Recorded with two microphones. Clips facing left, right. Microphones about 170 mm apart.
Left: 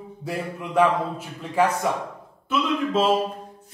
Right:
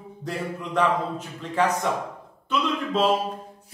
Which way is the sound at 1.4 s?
10° left (ahead or behind).